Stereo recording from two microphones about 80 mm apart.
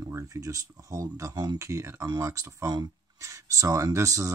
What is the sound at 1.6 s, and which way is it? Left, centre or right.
Speech, right.